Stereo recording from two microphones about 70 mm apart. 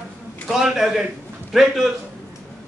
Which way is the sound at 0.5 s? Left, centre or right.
Centre.